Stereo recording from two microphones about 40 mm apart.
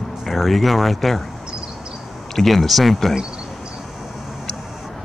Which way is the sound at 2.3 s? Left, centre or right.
Centre.